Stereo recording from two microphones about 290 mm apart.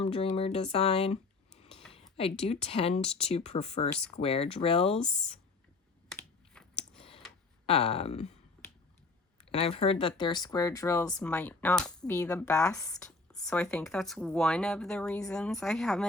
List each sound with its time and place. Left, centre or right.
0.0 s speech: centre
6.1 s computer keyboard: centre
7.7 s speech: left
9.5 s speech: centre